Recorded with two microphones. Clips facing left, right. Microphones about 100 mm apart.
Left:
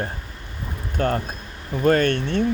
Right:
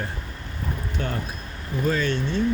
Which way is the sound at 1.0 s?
50° left (ahead or behind).